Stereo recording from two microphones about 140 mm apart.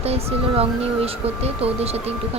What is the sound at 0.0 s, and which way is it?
Speech, 45° right (ahead or behind).